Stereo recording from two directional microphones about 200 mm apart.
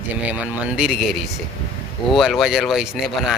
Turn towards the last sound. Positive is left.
turn(degrees=0)  # may be behind; listen again after turning